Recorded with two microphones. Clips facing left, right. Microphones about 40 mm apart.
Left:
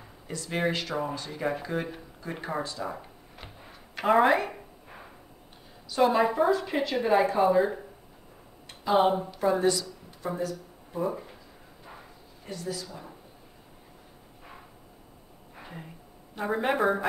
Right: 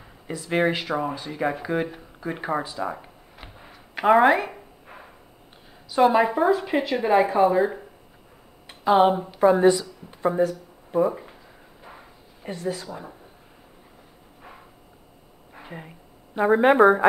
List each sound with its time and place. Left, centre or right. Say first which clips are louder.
0.0 s a woman's voice: right 4 dB; centre
4.9 s a sound: right 3 dB; right
5.9 s a woman's voice: right 5 dB; centre
9.3 s a woman's voice: right 8 dB; right
11.0 s speech: right 8 dB; centre
11.9 s a sound: right 2 dB; centre
12.4 s speech: right 6 dB; right
15.5 s a sound: right 4 dB; centre
16.3 s a woman's voice: right 10 dB; right